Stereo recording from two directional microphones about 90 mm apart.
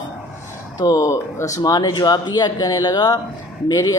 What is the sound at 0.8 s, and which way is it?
Speech, 45° left (ahead or behind).